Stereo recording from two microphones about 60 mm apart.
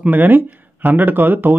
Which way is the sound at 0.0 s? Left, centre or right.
Right.